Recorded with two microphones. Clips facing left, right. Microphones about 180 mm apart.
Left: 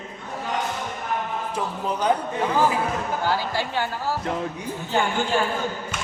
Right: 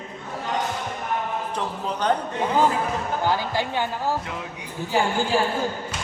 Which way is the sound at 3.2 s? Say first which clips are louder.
Right 2 dB; 15° right (ahead or behind).